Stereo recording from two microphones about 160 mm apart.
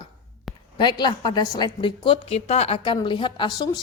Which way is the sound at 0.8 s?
30° left (ahead or behind).